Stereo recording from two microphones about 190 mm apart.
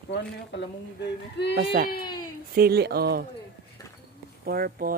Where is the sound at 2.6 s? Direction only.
55° right (ahead or behind).